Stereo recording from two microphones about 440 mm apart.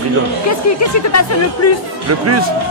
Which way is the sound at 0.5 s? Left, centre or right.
Left.